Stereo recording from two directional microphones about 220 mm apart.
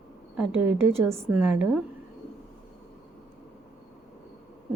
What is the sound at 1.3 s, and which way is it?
Speech, 5° right (ahead or behind).